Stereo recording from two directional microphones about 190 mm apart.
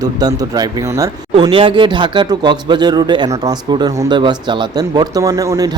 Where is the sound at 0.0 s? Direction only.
20° right (ahead or behind).